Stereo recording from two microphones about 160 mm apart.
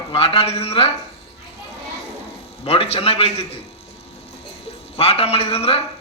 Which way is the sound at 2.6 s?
40° left (ahead or behind).